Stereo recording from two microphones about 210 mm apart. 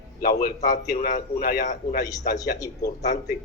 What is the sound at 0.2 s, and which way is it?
A man's voice, 45° left (ahead or behind).